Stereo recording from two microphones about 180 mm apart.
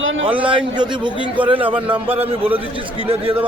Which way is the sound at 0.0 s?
90° right.